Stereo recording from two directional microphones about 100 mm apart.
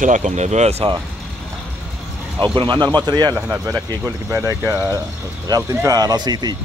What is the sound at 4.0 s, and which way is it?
Speech, 30° right (ahead or behind).